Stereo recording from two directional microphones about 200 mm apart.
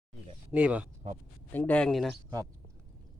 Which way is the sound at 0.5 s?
5° right (ahead or behind).